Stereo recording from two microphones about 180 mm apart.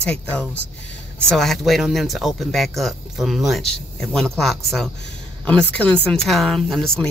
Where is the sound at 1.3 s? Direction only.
Centre (ahead or behind).